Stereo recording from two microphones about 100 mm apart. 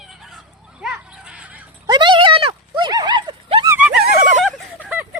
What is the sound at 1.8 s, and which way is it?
Horse, 50° right (ahead or behind).